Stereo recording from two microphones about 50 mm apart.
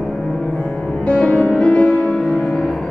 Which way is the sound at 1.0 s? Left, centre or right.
Left.